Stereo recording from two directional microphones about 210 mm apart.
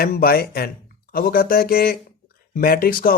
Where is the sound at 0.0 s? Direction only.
45° left (ahead or behind).